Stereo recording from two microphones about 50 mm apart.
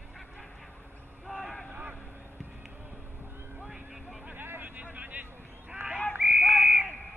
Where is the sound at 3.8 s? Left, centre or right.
Centre.